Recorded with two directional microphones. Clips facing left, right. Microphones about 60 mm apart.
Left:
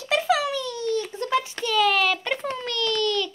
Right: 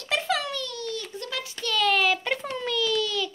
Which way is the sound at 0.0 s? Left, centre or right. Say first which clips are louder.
Left 5 dB; centre.